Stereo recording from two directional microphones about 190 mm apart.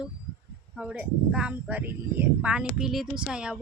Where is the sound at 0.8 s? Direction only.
5° right (ahead or behind).